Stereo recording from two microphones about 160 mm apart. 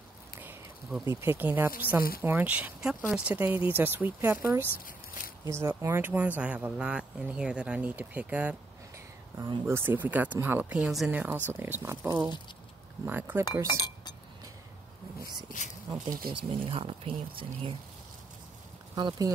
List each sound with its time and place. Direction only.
1.0 s speech: 15° right (ahead or behind)
9.7 s speech: 15° right (ahead or behind)
13.7 s chink: 25° left (ahead or behind)
16.3 s speech: 35° right (ahead or behind)
18.9 s speech: 25° right (ahead or behind)